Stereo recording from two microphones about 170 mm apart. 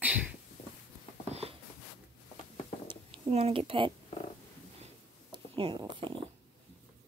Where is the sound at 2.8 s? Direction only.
30° right (ahead or behind).